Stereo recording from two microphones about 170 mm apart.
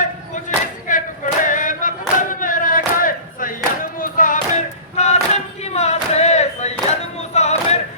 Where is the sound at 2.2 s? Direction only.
50° left (ahead or behind).